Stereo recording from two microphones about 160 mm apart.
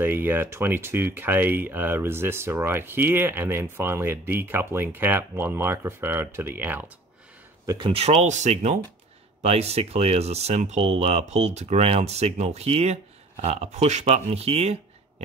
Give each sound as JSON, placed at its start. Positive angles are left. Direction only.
{"t": 0.0, "sound": "speech", "side_deg": -15}
{"t": 7.6, "sound": "speech", "side_deg": -30}